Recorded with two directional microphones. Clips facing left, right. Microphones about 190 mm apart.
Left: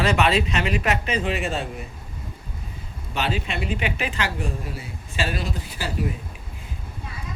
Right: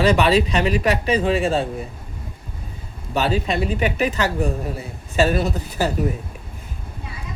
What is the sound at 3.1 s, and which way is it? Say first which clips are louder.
Speech: right 6 dB; 40° right (ahead or behind).